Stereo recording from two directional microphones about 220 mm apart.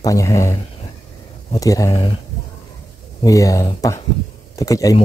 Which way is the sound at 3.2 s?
15° left (ahead or behind).